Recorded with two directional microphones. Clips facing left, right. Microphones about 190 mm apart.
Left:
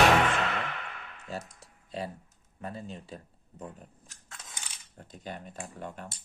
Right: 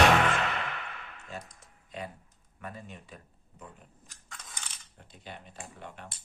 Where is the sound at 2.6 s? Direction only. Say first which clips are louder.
Left 4 dB; 30° left (ahead or behind).